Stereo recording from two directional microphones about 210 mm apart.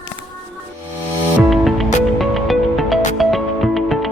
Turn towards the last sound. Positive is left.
turn(degrees=0)  # may be behind; listen again after turning